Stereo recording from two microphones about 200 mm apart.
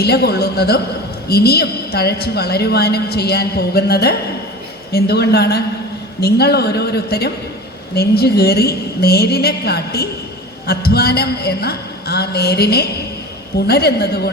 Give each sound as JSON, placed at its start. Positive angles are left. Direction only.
{"t": 0.0, "sound": "a woman's voice", "side_deg": 55}